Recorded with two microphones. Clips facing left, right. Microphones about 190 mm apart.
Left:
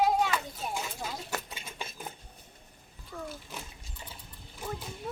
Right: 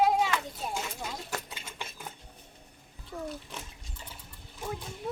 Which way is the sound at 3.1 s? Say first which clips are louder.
Right 2 dB; 35° right (ahead or behind).